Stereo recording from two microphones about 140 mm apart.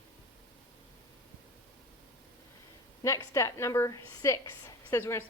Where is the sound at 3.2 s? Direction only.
20° left (ahead or behind).